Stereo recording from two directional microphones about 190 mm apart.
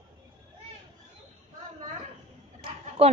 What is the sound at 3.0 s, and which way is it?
Speech, 30° right (ahead or behind).